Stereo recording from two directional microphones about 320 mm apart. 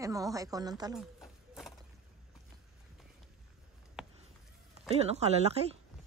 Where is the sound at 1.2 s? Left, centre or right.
Centre.